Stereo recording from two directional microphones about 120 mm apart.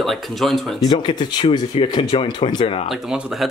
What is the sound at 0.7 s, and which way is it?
Speech, 40° left (ahead or behind).